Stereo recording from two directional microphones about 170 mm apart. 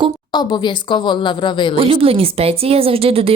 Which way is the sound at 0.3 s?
25° left (ahead or behind).